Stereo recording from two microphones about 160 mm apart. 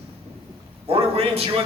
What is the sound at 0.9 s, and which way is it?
Speech, 35° right (ahead or behind).